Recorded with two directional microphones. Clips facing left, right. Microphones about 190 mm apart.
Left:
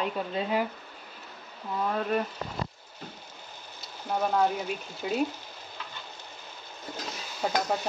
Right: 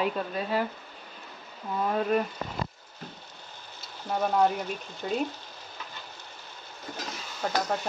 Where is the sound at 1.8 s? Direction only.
5° right (ahead or behind).